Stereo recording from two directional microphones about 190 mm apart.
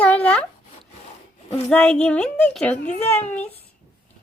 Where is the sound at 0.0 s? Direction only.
10° left (ahead or behind).